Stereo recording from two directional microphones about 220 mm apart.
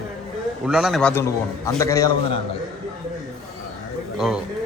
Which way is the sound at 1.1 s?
10° left (ahead or behind).